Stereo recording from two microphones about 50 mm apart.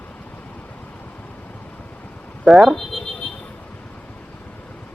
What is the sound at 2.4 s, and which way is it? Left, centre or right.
Speech, centre.